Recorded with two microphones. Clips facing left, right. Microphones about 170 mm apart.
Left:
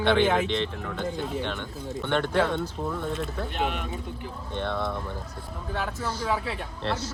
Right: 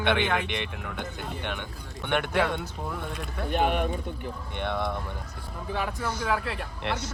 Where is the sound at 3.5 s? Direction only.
55° right (ahead or behind).